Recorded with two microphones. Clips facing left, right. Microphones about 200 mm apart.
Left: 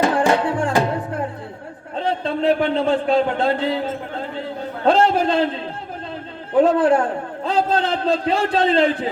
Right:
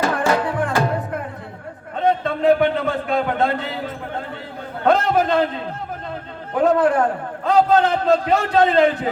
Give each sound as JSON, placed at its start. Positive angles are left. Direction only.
{"t": 0.0, "sound": "music", "side_deg": 30}
{"t": 2.0, "sound": "a man's voice", "side_deg": 30}
{"t": 4.9, "sound": "a man's voice", "side_deg": 30}
{"t": 6.6, "sound": "a man's voice", "side_deg": 30}